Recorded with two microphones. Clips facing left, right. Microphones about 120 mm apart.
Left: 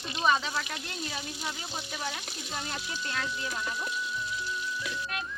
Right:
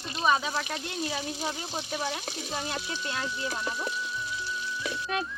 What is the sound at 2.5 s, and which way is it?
Speech, 25° right (ahead or behind).